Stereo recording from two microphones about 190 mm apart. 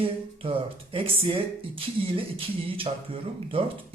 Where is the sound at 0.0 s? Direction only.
30° right (ahead or behind).